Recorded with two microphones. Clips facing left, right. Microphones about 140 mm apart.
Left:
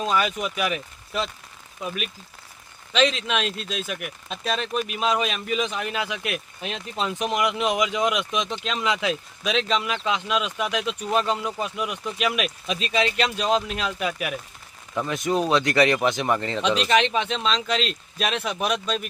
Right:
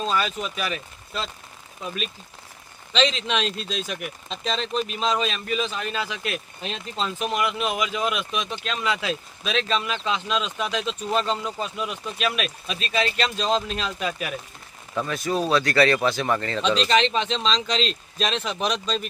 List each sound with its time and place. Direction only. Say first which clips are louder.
0.0 s speech: left 2 dB; 10° left (ahead or behind)